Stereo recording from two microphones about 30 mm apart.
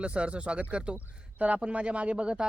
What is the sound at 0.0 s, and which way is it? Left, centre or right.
Speech, right.